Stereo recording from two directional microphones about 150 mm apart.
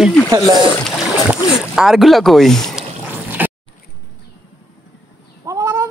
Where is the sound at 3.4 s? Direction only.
10° right (ahead or behind).